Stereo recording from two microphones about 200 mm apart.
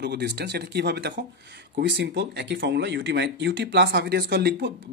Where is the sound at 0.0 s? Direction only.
55° right (ahead or behind).